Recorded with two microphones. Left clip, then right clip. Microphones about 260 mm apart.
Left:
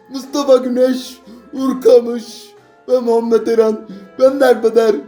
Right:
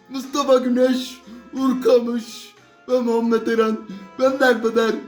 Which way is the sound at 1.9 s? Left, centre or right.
Centre.